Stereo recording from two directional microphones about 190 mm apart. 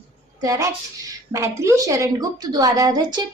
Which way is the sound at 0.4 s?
15° right (ahead or behind).